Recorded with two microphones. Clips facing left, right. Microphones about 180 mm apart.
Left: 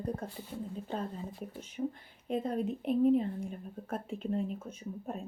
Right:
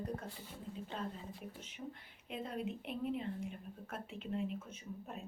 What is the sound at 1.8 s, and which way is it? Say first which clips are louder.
A woman's voice: left 13 dB; 45° left (ahead or behind).